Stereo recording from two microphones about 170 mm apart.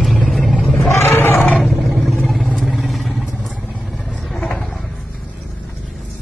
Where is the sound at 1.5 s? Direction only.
Centre (ahead or behind).